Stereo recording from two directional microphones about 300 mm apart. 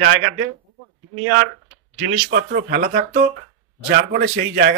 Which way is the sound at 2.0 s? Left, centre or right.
Right.